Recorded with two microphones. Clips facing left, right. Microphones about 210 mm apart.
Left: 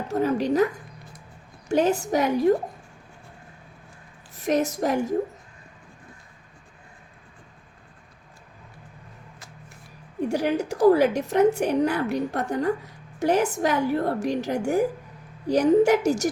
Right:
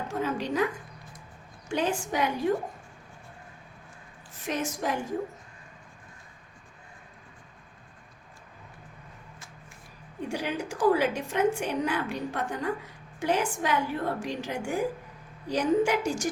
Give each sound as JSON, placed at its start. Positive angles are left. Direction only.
{"t": 0.1, "sound": "a woman's voice", "side_deg": 40}
{"t": 1.8, "sound": "a woman's voice", "side_deg": 40}
{"t": 4.4, "sound": "a woman's voice", "side_deg": 40}
{"t": 10.2, "sound": "a woman's voice", "side_deg": 40}